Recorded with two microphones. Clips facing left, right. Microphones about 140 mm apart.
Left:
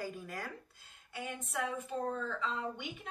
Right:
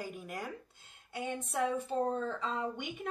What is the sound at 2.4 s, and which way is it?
Speech, 45° right (ahead or behind).